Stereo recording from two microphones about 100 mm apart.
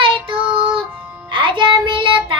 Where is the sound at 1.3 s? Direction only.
60° right (ahead or behind).